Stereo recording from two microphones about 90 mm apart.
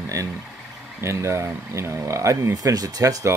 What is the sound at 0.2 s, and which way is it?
Speech, 35° right (ahead or behind).